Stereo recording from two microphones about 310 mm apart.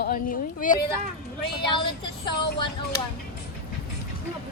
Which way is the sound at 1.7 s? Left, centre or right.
Centre.